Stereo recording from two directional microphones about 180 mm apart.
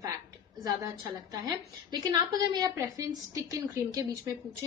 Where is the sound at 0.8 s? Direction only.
20° right (ahead or behind).